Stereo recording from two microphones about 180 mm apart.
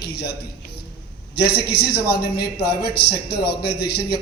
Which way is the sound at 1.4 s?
65° left (ahead or behind).